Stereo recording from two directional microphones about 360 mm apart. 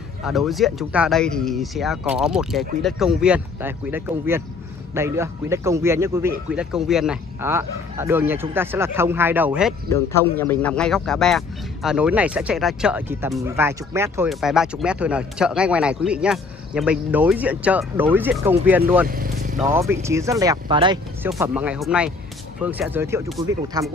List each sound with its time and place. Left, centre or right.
0.2 s a man's voice: centre
19.0 s vehicle: right
19.6 s a man's voice: centre